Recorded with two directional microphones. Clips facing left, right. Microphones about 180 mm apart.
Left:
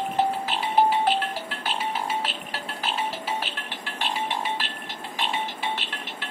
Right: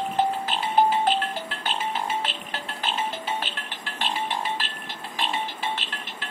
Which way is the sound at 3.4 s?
15° left (ahead or behind).